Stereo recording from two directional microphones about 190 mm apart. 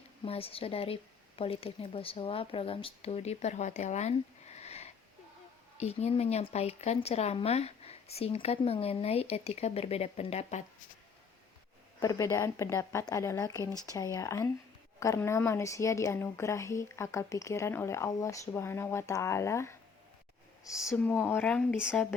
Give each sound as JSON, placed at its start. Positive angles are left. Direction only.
{"t": 0.3, "sound": "speech", "side_deg": 30}
{"t": 11.9, "sound": "a woman's voice", "side_deg": 20}
{"t": 20.9, "sound": "a woman's voice", "side_deg": 5}